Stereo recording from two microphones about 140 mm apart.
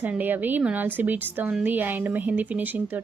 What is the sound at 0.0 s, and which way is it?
Speech, 10° right (ahead or behind).